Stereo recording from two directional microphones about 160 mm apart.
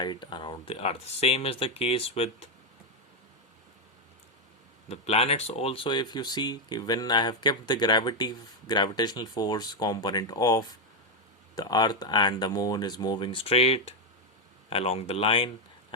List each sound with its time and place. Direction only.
0.0 s speech: 30° left (ahead or behind)
4.9 s speech: 40° left (ahead or behind)